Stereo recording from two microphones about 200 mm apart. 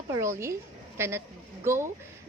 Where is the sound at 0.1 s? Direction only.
15° right (ahead or behind).